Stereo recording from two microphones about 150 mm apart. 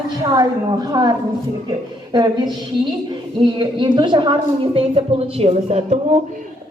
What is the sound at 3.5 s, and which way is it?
A woman's voice, 30° right (ahead or behind).